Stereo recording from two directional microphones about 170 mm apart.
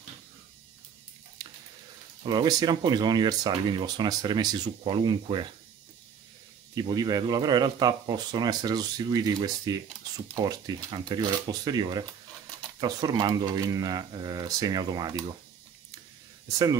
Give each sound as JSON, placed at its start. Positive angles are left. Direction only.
{"t": 2.2, "sound": "speech", "side_deg": -25}
{"t": 6.7, "sound": "speech", "side_deg": -25}
{"t": 16.4, "sound": "speech", "side_deg": -20}